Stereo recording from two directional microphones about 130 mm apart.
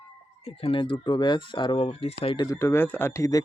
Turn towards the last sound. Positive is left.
turn(degrees=25)  # may be behind; listen again after turning